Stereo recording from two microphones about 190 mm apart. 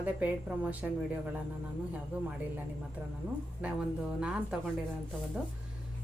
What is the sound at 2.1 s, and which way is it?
Speech, 10° right (ahead or behind).